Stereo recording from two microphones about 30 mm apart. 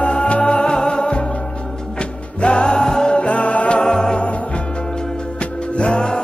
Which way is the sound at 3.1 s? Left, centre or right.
Left.